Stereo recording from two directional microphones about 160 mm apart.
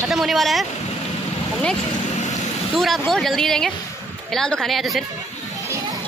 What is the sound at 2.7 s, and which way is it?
Speech, centre (ahead or behind).